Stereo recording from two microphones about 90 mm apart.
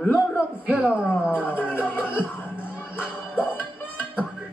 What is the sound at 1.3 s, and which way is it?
Music, 20° left (ahead or behind).